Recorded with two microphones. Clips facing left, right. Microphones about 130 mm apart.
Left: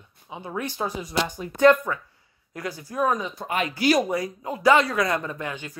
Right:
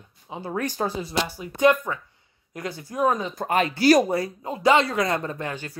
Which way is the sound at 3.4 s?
40° right (ahead or behind).